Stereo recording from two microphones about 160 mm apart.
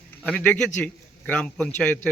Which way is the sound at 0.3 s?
10° left (ahead or behind).